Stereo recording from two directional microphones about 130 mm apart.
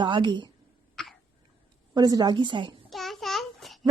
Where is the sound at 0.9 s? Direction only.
5° left (ahead or behind).